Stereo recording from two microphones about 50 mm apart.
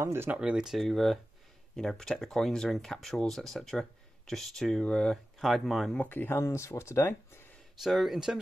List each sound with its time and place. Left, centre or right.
0.0 s speech: right
0.4 s speech: centre
0.7 s speech: centre
5.4 s speech: centre
6.0 s speech: left
6.3 s speech: left
7.8 s speech: centre